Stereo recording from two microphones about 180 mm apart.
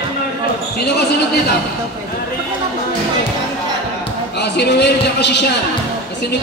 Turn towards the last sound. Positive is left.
turn(degrees=70)  # may be behind; listen again after turning